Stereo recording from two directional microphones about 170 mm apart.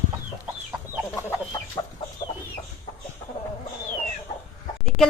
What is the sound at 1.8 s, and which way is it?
Chicken, 20° left (ahead or behind).